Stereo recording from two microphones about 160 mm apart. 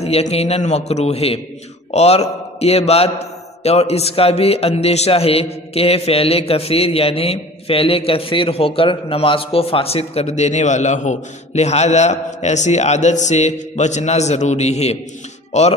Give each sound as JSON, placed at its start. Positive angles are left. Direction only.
{"t": 0.0, "sound": "a man's voice", "side_deg": 40}